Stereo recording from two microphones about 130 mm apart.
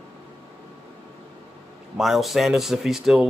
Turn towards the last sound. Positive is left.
turn(degrees=-5)  # may be behind; listen again after turning